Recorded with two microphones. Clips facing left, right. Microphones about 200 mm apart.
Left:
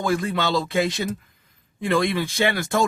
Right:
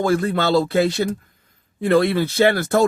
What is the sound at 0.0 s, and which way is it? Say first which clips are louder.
Speech: right 4 dB; 40° right (ahead or behind).